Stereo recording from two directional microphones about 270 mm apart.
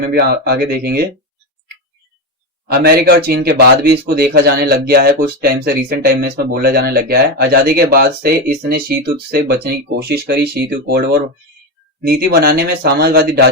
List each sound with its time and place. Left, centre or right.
0.1 s speech: right
2.6 s speech: right